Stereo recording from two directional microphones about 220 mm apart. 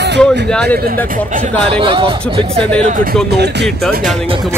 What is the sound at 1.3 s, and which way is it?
Speech, 25° right (ahead or behind).